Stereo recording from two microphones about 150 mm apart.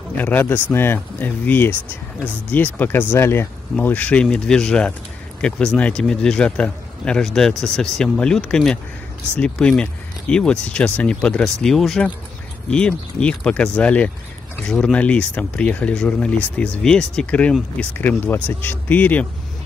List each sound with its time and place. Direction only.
0.2 s a man's voice: 10° left (ahead or behind)